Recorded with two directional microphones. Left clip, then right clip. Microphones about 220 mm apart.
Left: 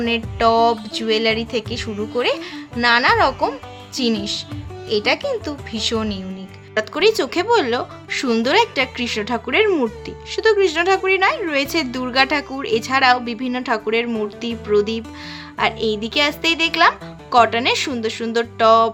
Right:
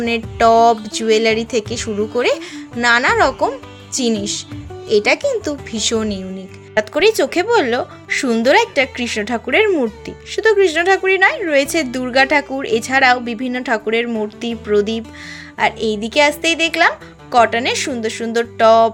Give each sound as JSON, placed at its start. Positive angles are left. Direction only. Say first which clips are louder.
{"t": 0.0, "sound": "a woman's voice", "louder": "right 3 dB", "side_deg": -15}